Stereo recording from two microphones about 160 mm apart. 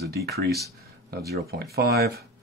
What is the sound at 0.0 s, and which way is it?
Speech, 80° right.